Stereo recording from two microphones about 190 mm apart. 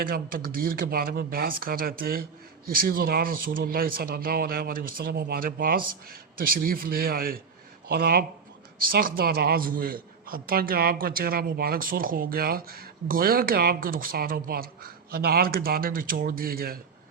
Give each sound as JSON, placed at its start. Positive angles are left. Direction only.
{"t": 0.0, "sound": "a man's voice", "side_deg": -50}